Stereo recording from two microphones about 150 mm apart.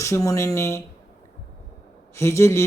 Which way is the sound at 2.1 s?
20° left (ahead or behind).